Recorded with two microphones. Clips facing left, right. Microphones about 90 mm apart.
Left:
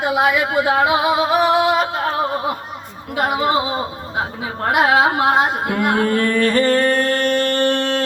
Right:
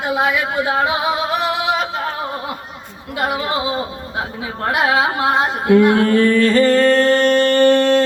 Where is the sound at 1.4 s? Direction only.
45° left (ahead or behind).